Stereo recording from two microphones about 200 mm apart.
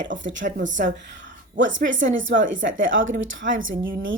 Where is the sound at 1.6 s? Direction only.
70° right (ahead or behind).